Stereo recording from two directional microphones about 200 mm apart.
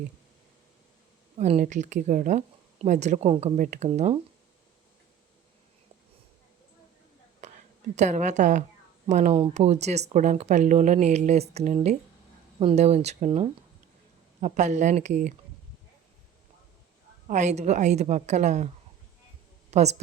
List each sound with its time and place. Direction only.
1.4 s speech: 35° right (ahead or behind)
7.4 s a sound: 35° right (ahead or behind)
7.9 s speech: 35° right (ahead or behind)
17.2 s speech: 35° right (ahead or behind)
19.7 s speech: 35° right (ahead or behind)